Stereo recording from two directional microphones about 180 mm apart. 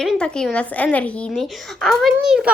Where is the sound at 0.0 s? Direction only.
Centre (ahead or behind).